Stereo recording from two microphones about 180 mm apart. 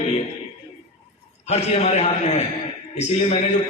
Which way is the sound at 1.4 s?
35° left (ahead or behind).